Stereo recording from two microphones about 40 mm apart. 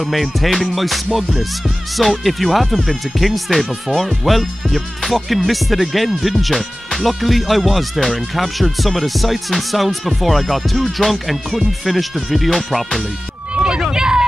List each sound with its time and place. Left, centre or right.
0.0 s speech: centre
13.6 s run: centre